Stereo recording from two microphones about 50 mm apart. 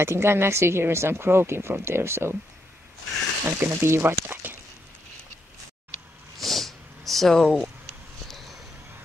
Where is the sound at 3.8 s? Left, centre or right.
Right.